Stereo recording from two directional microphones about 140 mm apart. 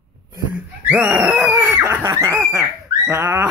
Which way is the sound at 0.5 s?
5° right (ahead or behind).